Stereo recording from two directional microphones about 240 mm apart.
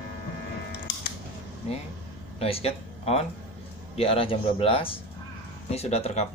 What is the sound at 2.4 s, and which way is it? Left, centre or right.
Speech, left.